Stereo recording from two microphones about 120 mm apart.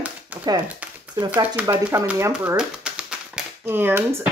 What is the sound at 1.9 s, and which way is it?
Speech, 25° right (ahead or behind).